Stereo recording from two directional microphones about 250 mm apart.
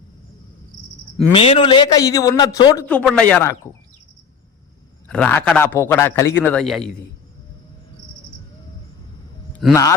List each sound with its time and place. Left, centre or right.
1.3 s a man's voice: left
2.8 s speech: centre
5.0 s a man's voice: centre
9.6 s speech: centre